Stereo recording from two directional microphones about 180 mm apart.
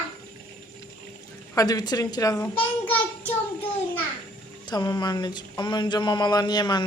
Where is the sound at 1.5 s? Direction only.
20° left (ahead or behind).